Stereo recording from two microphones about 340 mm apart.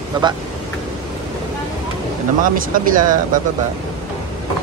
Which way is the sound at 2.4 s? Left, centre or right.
Right.